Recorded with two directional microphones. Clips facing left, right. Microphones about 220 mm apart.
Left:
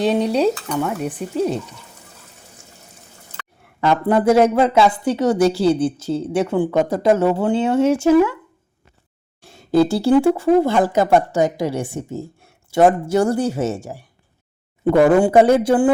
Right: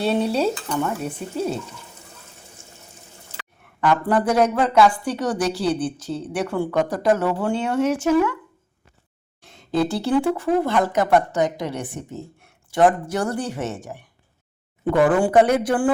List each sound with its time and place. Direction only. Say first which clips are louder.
0.0 s stir: left 4 dB; 15° left (ahead or behind)
3.8 s speech: left 3 dB; 25° left (ahead or behind)
9.4 s speech: left 6 dB; 30° left (ahead or behind)
15.0 s speech: left 3 dB; 25° left (ahead or behind)